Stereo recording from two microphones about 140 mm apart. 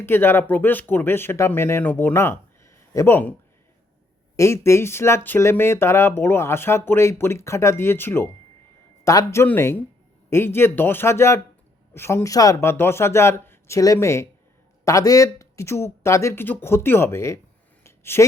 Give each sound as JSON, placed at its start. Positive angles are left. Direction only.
{"t": 0.0, "sound": "speech", "side_deg": 15}
{"t": 4.4, "sound": "speech", "side_deg": 20}
{"t": 17.8, "sound": "a sound", "side_deg": 20}